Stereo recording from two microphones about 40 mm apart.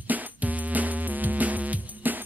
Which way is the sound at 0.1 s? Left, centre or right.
Right.